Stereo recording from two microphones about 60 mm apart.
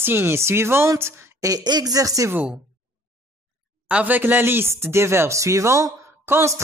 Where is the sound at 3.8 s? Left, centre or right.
Right.